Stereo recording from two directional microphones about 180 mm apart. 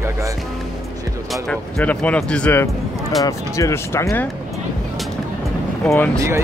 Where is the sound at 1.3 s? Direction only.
5° left (ahead or behind).